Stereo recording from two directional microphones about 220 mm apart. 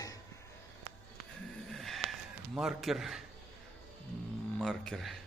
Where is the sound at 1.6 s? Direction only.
Centre (ahead or behind).